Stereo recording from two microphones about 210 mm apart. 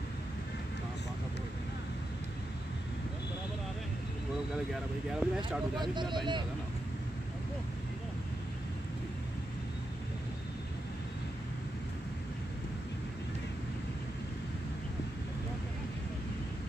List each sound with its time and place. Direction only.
5.2 s speech: 5° right (ahead or behind)
5.8 s speech: 20° right (ahead or behind)